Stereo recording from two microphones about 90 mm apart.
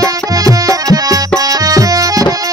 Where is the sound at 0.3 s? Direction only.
40° right (ahead or behind).